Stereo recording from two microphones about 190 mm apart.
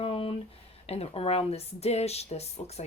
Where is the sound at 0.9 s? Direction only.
30° left (ahead or behind).